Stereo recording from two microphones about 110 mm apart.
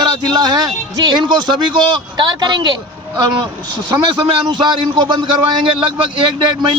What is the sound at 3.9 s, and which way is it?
Speech, 45° right (ahead or behind).